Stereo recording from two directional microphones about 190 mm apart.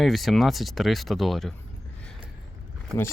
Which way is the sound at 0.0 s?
Centre (ahead or behind).